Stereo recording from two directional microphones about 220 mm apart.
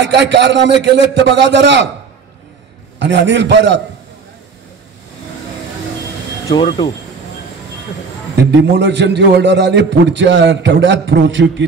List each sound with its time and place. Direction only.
0.0 s a man's voice: 50° right (ahead or behind)
3.0 s a man's voice: 55° right (ahead or behind)
6.5 s speech: 20° left (ahead or behind)
8.5 s a man's voice: 55° right (ahead or behind)